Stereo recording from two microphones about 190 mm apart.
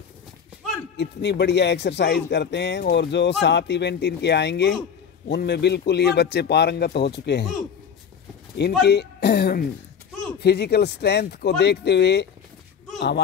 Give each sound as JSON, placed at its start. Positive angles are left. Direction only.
{"t": 0.9, "sound": "a man's voice", "side_deg": 65}
{"t": 8.8, "sound": "a man's voice", "side_deg": 60}